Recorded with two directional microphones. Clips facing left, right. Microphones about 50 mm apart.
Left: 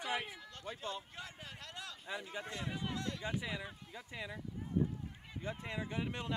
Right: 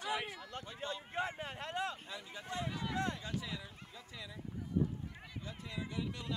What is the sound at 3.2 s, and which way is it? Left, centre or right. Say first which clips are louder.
Speech: left 3 dB; left.